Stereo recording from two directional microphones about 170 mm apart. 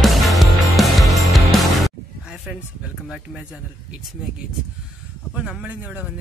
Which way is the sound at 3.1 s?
5° right (ahead or behind).